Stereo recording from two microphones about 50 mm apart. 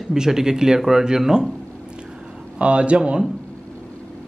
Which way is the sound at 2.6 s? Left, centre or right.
Right.